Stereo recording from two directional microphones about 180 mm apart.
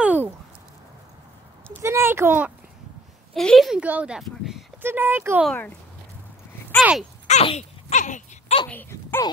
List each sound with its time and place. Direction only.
0.0 s a sound: 10° right (ahead or behind)
1.8 s a woman's voice: 15° right (ahead or behind)
3.3 s a woman's voice: centre (ahead or behind)
6.8 s a woman's voice: 5° right (ahead or behind)
7.2 s a sound: 40° left (ahead or behind)
8.6 s speech: 10° left (ahead or behind)